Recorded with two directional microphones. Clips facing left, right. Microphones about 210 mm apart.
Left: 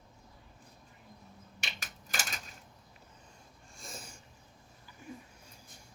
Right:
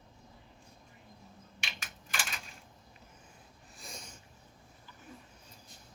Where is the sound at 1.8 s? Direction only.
40° left (ahead or behind).